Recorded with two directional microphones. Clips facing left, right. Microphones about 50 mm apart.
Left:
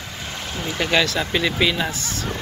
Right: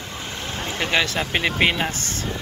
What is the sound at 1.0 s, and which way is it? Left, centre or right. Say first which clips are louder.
Speech: left 1 dB; right.